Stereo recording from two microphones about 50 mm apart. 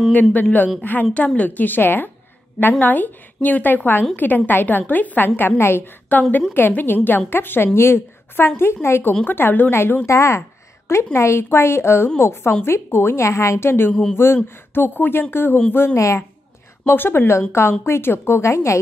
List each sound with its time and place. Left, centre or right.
0.1 s a woman's voice: left
5.6 s speech: left
6.1 s a woman's voice: left
9.2 s a woman's voice: left
10.0 s speech: left
11.1 s a woman's voice: left
17.5 s speech: left